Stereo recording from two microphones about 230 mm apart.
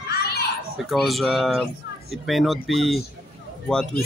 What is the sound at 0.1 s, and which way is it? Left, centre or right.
Children playing, left.